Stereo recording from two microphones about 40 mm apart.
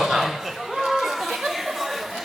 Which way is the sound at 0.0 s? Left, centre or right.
Centre.